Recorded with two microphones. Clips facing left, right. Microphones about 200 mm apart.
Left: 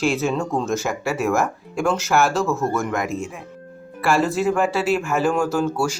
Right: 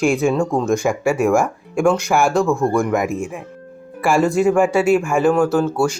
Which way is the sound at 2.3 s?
15° right (ahead or behind).